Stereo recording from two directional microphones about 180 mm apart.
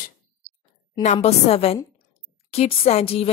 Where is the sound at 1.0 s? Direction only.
40° left (ahead or behind).